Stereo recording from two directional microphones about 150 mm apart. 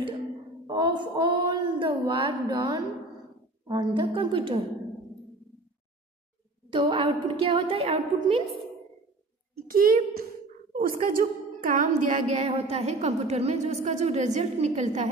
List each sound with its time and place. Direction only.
0.7 s child singing: 30° right (ahead or behind)
3.6 s a woman's voice: 25° right (ahead or behind)
6.7 s a woman's voice: 35° right (ahead or behind)
9.7 s a child's voice: 75° right (ahead or behind); by 15.0 s 50° right (ahead or behind)